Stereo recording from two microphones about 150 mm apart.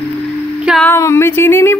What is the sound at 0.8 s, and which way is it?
Speech, 15° left (ahead or behind).